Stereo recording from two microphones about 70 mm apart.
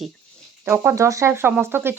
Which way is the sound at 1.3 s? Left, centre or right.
Right.